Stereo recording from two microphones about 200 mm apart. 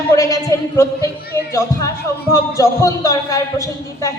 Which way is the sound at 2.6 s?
15° left (ahead or behind).